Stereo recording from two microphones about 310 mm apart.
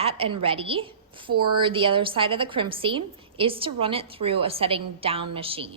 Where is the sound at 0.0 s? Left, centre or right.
Centre.